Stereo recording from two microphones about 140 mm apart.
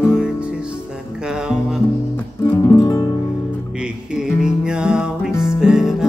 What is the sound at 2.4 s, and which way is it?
Music, 15° left (ahead or behind).